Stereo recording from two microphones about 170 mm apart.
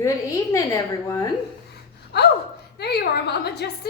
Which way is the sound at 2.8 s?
70° left (ahead or behind).